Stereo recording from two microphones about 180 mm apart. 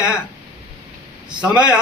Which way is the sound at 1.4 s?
5° right (ahead or behind).